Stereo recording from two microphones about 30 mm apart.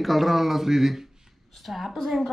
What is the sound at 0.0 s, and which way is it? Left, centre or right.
Speech, centre.